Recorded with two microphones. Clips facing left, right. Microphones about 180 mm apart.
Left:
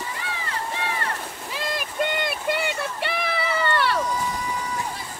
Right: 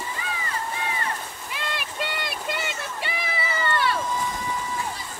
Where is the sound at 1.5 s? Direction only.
45° left (ahead or behind); by 4.0 s 65° left (ahead or behind).